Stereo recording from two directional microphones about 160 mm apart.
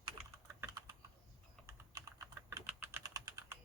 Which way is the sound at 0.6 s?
20° right (ahead or behind).